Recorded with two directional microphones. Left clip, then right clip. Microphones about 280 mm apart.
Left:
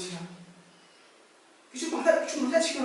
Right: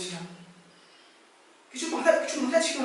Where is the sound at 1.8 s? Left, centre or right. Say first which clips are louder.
Right 1 dB; centre.